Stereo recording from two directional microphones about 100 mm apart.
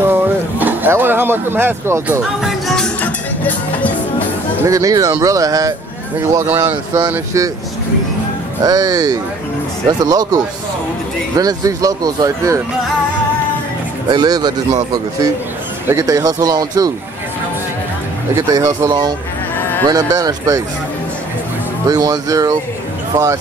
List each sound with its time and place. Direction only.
0.0 s a sound: 20° right (ahead or behind)
2.4 s music: 5° left (ahead or behind)
4.6 s speech: 35° right (ahead or behind)
6.4 s speech: 15° right (ahead or behind)
8.6 s speech: 40° right (ahead or behind)
14.0 s speech: 45° right (ahead or behind)
18.3 s speech: 35° right (ahead or behind)
21.8 s speech: 40° right (ahead or behind)